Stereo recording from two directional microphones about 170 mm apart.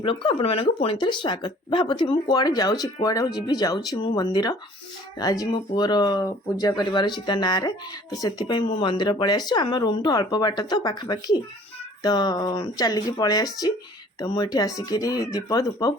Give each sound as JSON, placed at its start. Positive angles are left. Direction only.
{"t": 0.0, "sound": "speech", "side_deg": 30}